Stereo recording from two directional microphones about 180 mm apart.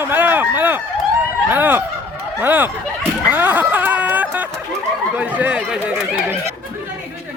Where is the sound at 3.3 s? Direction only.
10° right (ahead or behind).